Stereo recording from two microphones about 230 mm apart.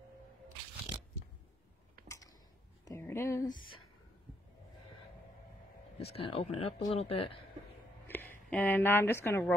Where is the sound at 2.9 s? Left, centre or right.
Centre.